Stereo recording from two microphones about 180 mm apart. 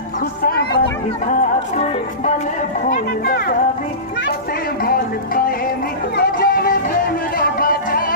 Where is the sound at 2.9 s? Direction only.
55° left (ahead or behind).